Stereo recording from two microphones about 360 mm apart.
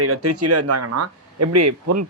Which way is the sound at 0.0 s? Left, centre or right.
Right.